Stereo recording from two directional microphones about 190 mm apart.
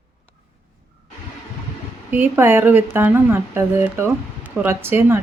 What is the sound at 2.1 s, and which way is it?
Speech, 10° right (ahead or behind).